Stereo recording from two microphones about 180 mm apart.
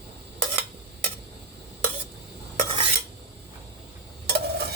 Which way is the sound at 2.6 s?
30° right (ahead or behind).